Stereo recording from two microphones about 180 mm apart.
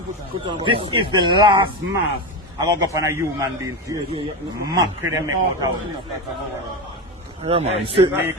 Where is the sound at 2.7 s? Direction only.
20° right (ahead or behind).